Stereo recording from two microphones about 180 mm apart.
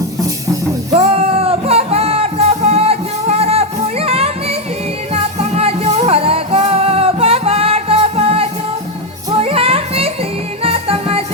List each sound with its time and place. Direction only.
0.9 s music: 35° right (ahead or behind)